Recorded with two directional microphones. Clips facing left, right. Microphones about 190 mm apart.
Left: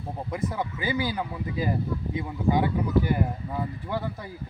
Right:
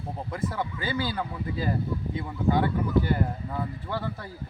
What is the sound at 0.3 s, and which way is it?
Speech, 15° left (ahead or behind).